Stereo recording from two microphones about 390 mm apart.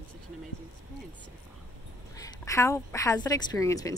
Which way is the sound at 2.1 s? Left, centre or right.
Centre.